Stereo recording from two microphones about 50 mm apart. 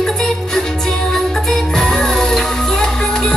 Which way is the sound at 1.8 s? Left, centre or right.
Centre.